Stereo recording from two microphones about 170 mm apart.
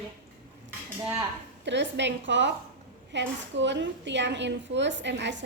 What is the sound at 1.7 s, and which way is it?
A woman's voice, 90° right.